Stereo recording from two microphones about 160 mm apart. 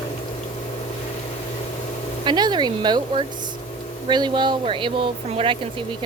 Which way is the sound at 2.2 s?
30° right (ahead or behind).